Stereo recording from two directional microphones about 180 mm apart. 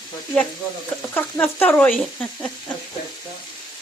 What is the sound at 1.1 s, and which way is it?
Speech, 10° left (ahead or behind).